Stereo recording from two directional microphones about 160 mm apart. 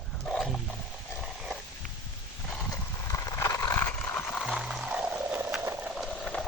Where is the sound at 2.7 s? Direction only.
20° left (ahead or behind); by 5.6 s 5° right (ahead or behind).